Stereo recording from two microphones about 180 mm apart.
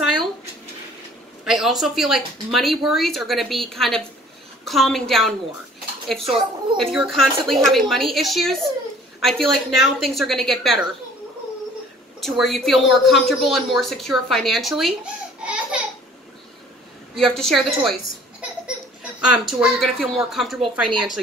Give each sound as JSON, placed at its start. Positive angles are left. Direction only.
{"t": 1.4, "sound": "a woman's voice", "side_deg": 0}
{"t": 6.1, "sound": "speech", "side_deg": -30}
{"t": 6.8, "sound": "a woman's voice", "side_deg": 0}
{"t": 12.2, "sound": "a woman's voice", "side_deg": 0}
{"t": 15.4, "sound": "a sound", "side_deg": -5}
{"t": 17.1, "sound": "a woman's voice", "side_deg": 0}
{"t": 19.4, "sound": "a woman's voice", "side_deg": 0}